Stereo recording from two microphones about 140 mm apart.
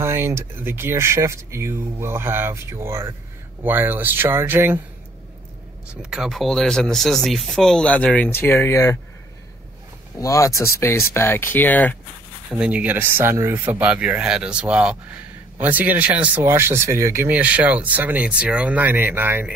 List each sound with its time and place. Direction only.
0.0 s speech: 15° right (ahead or behind)
6.0 s speech: 5° right (ahead or behind); by 8.9 s 20° left (ahead or behind)
10.1 s speech: 25° left (ahead or behind)
12.4 s speech: 10° right (ahead or behind)